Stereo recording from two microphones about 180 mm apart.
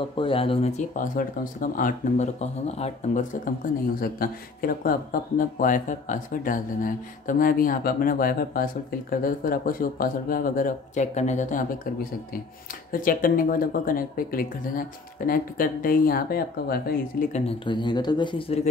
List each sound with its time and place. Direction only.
0.2 s speech: 30° left (ahead or behind)
3.6 s speech: 50° left (ahead or behind)
17.5 s speech: 25° left (ahead or behind)